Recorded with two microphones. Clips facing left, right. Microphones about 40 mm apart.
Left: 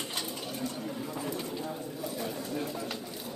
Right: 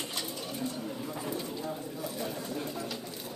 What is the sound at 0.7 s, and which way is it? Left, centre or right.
Bird, centre.